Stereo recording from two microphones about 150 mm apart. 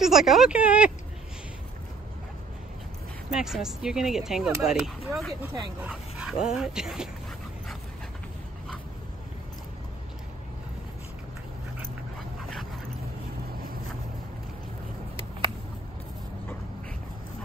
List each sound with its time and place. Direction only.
0.0 s speech: centre (ahead or behind)
3.3 s speech: 5° right (ahead or behind)